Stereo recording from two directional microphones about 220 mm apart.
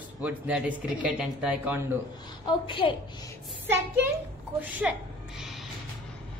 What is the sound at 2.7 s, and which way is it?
Speech, 25° left (ahead or behind).